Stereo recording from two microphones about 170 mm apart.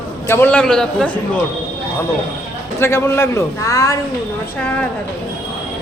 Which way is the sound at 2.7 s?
15° left (ahead or behind).